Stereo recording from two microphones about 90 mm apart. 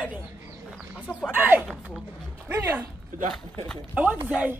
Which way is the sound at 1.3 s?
20° right (ahead or behind).